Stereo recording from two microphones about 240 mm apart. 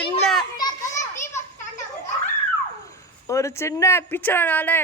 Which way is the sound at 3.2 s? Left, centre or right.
Centre.